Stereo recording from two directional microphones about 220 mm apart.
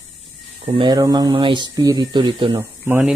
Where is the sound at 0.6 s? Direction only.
25° right (ahead or behind).